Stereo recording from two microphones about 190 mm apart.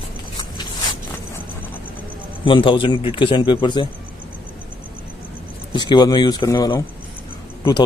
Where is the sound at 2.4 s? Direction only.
25° left (ahead or behind).